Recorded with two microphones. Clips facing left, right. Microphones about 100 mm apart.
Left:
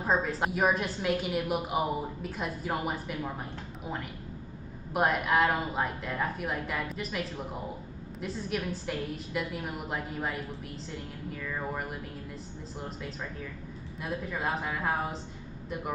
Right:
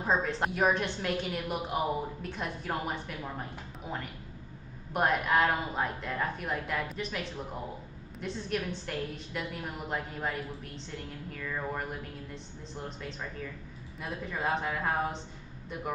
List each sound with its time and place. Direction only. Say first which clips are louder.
0.0 s a woman's voice: left 1 dB; 5° left (ahead or behind)